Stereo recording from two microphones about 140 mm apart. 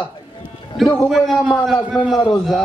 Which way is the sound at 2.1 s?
30° left (ahead or behind).